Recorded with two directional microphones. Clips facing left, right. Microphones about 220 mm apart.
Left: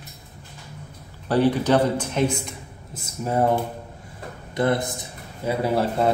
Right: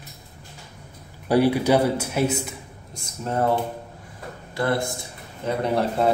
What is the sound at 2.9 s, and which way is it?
Speech, 10° left (ahead or behind).